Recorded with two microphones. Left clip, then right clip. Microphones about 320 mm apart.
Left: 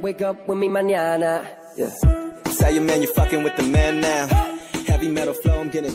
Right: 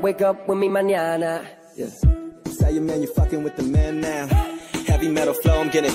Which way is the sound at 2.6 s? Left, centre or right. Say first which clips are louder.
Left 4 dB; left.